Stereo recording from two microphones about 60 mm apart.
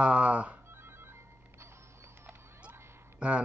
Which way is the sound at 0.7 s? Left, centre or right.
Right.